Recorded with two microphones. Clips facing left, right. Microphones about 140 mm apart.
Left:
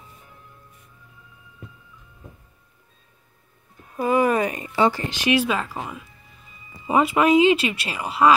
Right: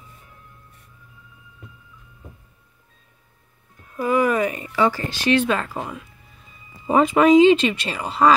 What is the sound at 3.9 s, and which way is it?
Speech, 25° left (ahead or behind).